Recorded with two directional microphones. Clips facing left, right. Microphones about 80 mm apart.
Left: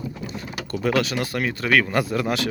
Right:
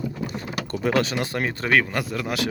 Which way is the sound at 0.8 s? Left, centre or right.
Right.